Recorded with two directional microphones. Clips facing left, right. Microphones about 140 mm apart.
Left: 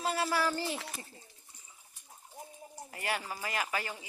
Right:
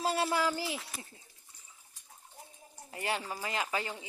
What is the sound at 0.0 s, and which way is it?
Speech, 25° right (ahead or behind).